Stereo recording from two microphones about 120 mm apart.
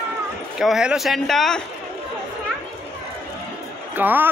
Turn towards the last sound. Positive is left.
turn(degrees=-15)  # may be behind; listen again after turning